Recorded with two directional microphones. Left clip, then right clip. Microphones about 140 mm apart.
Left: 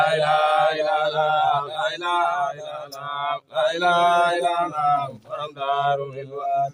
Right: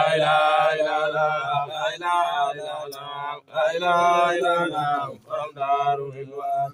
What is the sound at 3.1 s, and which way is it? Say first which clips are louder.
Mantra: left 3 dB; 40° left (ahead or behind).